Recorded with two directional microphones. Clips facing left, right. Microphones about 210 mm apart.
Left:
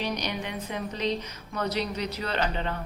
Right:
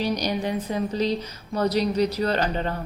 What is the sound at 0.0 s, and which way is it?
Speech, 35° right (ahead or behind).